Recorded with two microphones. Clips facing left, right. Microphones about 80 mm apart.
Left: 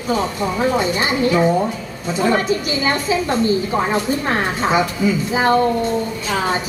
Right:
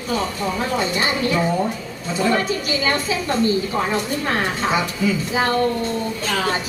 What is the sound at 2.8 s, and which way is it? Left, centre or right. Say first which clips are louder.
A woman's voice: left 4 dB; left.